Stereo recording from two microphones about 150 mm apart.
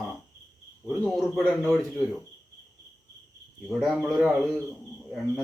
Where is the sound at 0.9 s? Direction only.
5° right (ahead or behind).